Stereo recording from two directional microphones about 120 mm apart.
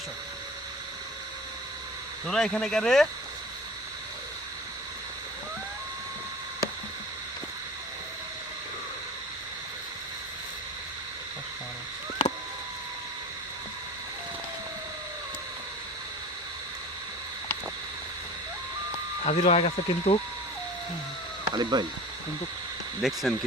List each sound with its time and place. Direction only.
2.2 s speech: 5° left (ahead or behind)
19.2 s speech: 70° left (ahead or behind)
21.5 s speech: 35° right (ahead or behind)
23.0 s speech: centre (ahead or behind)